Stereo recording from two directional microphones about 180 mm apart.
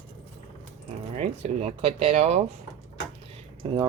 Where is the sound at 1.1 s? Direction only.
35° right (ahead or behind).